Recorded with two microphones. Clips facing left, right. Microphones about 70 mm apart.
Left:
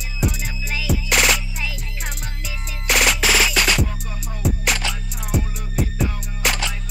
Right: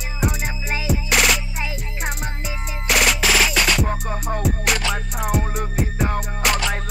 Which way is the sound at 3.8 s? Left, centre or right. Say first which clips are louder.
Right 6 dB; right.